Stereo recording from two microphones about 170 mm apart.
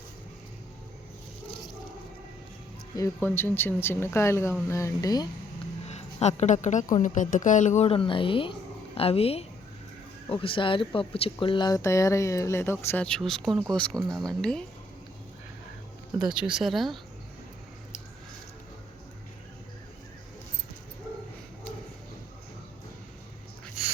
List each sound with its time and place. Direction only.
2.9 s speech: 15° left (ahead or behind)
5.9 s a woman's voice: 40° left (ahead or behind); by 13.7 s centre (ahead or behind)
13.9 s speech: 25° right (ahead or behind)
14.3 s speech: 5° left (ahead or behind)
16.3 s speech: 5° right (ahead or behind)